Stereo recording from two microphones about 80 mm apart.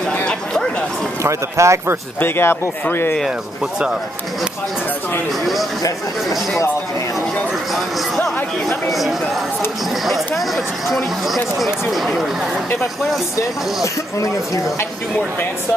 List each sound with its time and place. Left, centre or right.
0.1 s a sound: centre
1.2 s speech: right
2.1 s speech: left
5.4 s speech: centre
8.6 s speech: centre
14.2 s speech: left